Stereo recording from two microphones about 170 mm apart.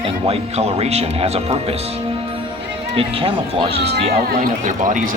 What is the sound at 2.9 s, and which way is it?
Speech, 35° right (ahead or behind).